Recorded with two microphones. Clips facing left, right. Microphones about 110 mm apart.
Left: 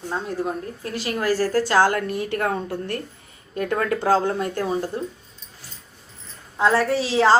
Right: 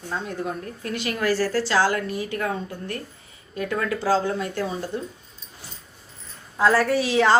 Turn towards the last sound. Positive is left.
turn(degrees=30)  # may be behind; listen again after turning